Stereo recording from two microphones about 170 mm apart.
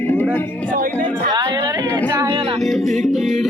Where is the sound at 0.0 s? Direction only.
10° left (ahead or behind).